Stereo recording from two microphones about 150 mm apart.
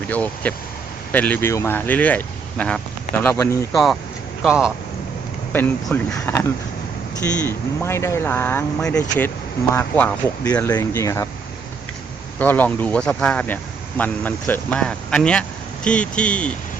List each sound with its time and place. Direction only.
0.1 s speech: 10° left (ahead or behind)
3.7 s speech: centre (ahead or behind)
5.5 s speech: 15° left (ahead or behind)
7.4 s speech: 15° left (ahead or behind)
12.4 s speech: 10° left (ahead or behind)